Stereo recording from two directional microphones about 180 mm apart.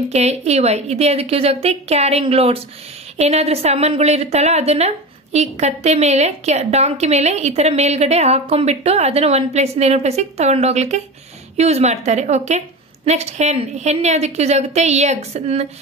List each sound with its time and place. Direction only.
0.1 s a woman's voice: 35° right (ahead or behind)